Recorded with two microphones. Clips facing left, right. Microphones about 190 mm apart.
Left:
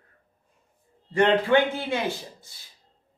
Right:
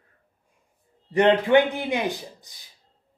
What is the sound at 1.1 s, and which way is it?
Speech, 15° right (ahead or behind).